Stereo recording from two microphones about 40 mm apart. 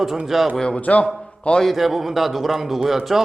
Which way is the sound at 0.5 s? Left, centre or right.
Centre.